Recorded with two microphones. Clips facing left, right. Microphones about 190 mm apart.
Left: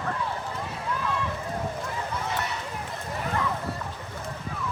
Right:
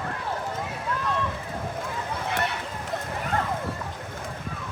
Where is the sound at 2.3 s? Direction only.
60° right (ahead or behind).